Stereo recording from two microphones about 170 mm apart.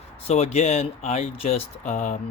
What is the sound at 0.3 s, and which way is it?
Speech, 40° left (ahead or behind).